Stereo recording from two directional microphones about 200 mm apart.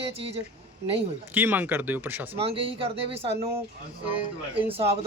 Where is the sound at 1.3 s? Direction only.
10° right (ahead or behind).